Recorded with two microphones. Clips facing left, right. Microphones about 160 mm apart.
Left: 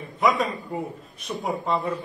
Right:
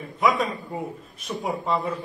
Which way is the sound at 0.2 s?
Centre (ahead or behind).